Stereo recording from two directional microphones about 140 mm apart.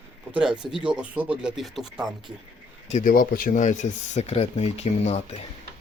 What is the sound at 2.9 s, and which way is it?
Speech, 75° left (ahead or behind).